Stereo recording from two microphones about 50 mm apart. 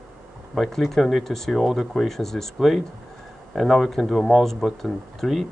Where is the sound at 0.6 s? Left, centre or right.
Centre.